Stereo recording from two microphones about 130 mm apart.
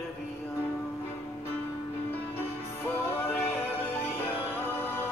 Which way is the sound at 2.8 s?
15° left (ahead or behind).